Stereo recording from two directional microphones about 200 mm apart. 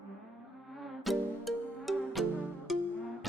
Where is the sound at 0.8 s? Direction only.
Centre (ahead or behind).